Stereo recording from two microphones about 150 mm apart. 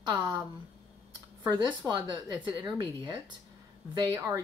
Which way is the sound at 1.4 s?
30° right (ahead or behind).